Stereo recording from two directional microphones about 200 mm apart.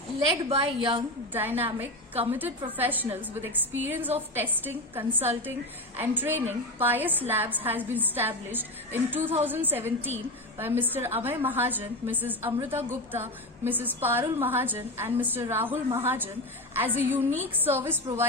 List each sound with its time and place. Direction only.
0.4 s a woman's voice: 25° right (ahead or behind)
1.3 s a woman's voice: 10° right (ahead or behind)